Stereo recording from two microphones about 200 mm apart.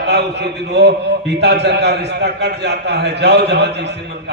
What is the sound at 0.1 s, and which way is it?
A man's voice, 55° right (ahead or behind).